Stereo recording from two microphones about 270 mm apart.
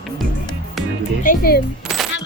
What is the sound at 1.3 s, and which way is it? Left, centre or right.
Speech, left.